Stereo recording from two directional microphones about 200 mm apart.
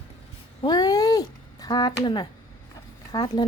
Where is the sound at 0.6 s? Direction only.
20° left (ahead or behind).